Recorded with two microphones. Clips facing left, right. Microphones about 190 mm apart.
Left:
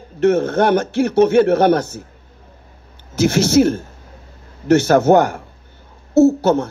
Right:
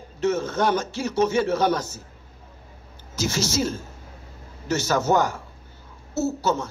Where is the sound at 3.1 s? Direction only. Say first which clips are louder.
Left 12 dB; 60° left (ahead or behind).